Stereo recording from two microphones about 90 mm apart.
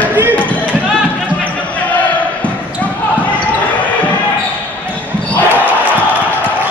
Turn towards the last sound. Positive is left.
turn(degrees=20)  # may be behind; listen again after turning